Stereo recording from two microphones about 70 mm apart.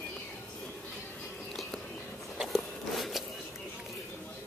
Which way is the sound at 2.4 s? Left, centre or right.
Centre.